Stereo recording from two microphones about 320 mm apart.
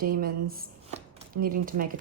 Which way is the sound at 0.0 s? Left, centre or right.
Right.